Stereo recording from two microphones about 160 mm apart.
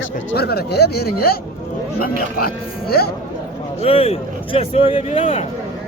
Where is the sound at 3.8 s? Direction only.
35° left (ahead or behind).